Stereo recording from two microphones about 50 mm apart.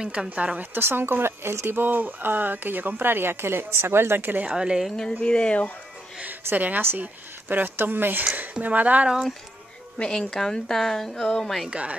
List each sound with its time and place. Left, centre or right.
0.0 s a woman's voice: centre
0.6 s speech: right
1.8 s speech: right
4.6 s a woman's voice: centre
4.9 s speech: centre
6.5 s speech: right
8.5 s speech: right
9.9 s a woman's voice: centre
11.7 s speech: right